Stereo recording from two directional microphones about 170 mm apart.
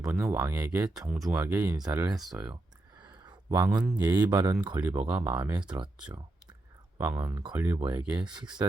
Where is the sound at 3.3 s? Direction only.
15° right (ahead or behind).